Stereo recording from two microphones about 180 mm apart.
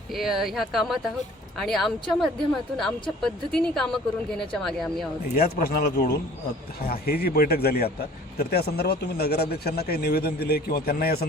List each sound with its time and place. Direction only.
0.1 s speech: centre (ahead or behind)
5.3 s speech: 50° left (ahead or behind)